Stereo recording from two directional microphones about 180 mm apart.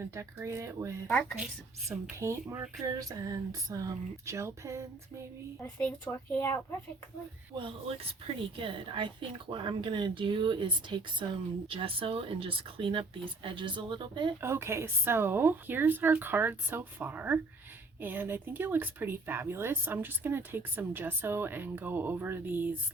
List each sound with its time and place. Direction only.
0.1 s speech: 15° right (ahead or behind)
1.0 s speech: 5° left (ahead or behind)
1.9 s speech: 15° right (ahead or behind)
5.8 s speech: 10° left (ahead or behind)
7.5 s speech: 30° right (ahead or behind)
14.4 s speech: 15° right (ahead or behind)